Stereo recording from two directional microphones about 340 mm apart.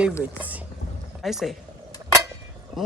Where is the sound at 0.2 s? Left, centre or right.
Centre.